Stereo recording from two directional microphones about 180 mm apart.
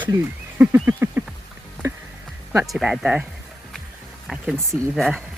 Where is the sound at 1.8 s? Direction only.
15° right (ahead or behind).